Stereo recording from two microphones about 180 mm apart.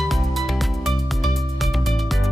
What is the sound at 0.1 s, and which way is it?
Music, centre (ahead or behind).